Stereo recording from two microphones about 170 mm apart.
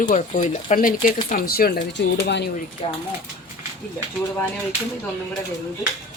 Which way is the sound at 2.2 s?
80° left.